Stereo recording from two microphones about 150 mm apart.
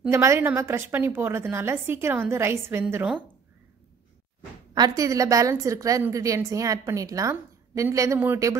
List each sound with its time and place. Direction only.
0.1 s a woman's voice: 20° right (ahead or behind)
4.7 s a woman's voice: 25° right (ahead or behind)